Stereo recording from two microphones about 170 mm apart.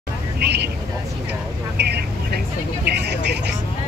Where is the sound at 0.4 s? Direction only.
75° right (ahead or behind).